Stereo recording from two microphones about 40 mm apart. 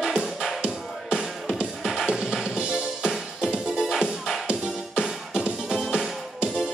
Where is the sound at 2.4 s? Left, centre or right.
Centre.